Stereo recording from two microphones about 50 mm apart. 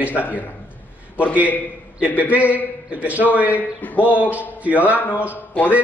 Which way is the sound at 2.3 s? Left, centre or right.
Right.